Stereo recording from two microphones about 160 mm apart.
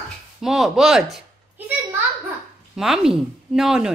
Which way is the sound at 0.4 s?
5° right (ahead or behind).